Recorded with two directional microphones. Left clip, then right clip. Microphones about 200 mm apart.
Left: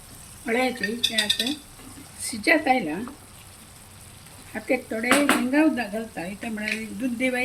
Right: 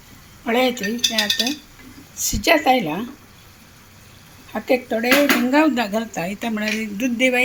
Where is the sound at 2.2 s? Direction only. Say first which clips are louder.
Right 9 dB; 20° left (ahead or behind).